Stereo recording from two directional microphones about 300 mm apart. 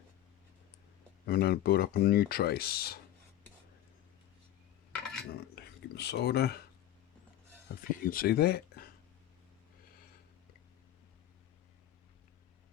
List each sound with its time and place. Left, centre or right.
1.2 s speech: left
5.3 s a sound: left
7.7 s speech: left